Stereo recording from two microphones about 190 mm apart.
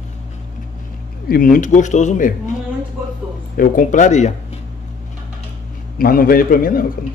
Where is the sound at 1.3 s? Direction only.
45° left (ahead or behind).